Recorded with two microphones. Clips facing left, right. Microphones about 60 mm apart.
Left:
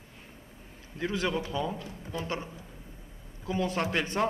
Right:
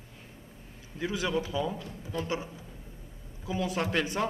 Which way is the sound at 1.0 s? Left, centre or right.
Centre.